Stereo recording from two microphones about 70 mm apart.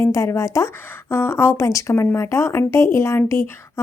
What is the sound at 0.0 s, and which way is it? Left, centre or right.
Speech, left.